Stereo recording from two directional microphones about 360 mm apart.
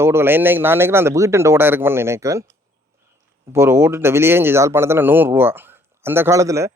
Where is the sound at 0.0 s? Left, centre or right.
Centre.